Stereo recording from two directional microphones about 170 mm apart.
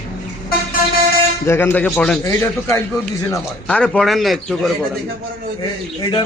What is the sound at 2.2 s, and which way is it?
Speech, 15° left (ahead or behind).